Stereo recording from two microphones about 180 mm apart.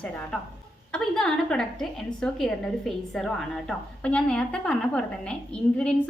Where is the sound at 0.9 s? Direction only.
5° left (ahead or behind).